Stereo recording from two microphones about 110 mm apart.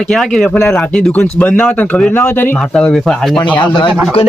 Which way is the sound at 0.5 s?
20° left (ahead or behind).